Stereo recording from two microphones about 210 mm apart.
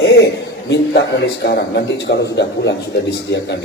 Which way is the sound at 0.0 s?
55° left (ahead or behind).